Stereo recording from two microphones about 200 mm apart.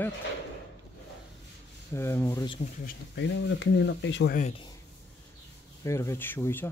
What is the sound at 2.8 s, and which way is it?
Speech, 60° left (ahead or behind).